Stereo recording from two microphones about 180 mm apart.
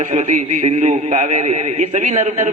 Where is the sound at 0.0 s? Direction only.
40° right (ahead or behind).